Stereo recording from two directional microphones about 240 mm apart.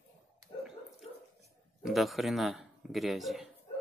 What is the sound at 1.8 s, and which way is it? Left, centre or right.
A man's voice, centre.